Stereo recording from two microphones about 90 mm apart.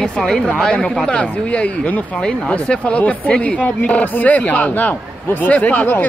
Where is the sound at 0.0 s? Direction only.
10° left (ahead or behind).